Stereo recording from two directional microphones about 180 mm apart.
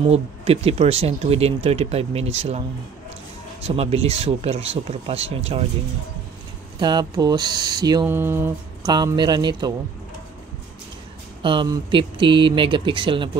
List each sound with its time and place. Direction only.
0.1 s speech: 35° right (ahead or behind)
3.6 s speech: 35° right (ahead or behind)
6.8 s speech: 25° right (ahead or behind)
8.8 s speech: 25° right (ahead or behind)
11.4 s speech: 25° right (ahead or behind)